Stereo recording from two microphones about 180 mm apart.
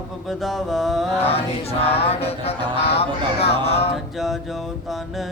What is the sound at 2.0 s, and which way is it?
Speech, 35° left (ahead or behind).